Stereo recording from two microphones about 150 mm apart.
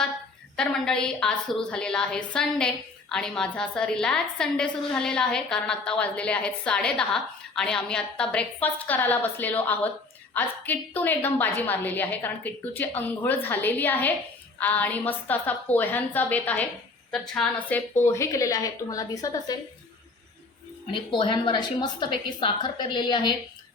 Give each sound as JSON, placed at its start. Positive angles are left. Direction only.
{"t": 0.5, "sound": "a woman's voice", "side_deg": 5}
{"t": 20.9, "sound": "a woman's voice", "side_deg": 35}